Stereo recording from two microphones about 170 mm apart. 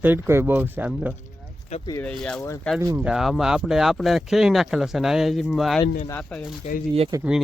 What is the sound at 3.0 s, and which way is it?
Speech, centre (ahead or behind).